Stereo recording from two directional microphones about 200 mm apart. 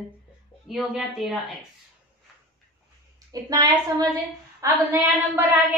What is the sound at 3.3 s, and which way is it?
A woman's voice, 20° right (ahead or behind).